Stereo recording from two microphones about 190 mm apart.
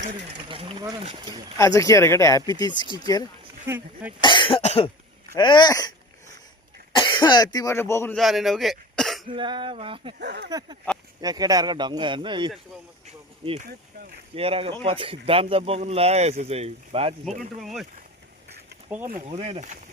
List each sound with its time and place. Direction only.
0.3 s speech: 25° right (ahead or behind)
1.5 s speech: 15° left (ahead or behind)
3.7 s speech: 10° right (ahead or behind)
4.2 s speech: 25° left (ahead or behind)
8.1 s speech: centre (ahead or behind)
9.3 s speech: 25° right (ahead or behind)
10.2 s speech: 65° right (ahead or behind)
11.2 s speech: 20° right (ahead or behind)
13.1 s a sound: 35° right (ahead or behind)
13.7 s a sound: 55° right (ahead or behind)
14.3 s speech: 30° right (ahead or behind)
17.6 s speech: centre (ahead or behind)
19.0 s speech: 45° right (ahead or behind)
19.4 s speech: 35° right (ahead or behind)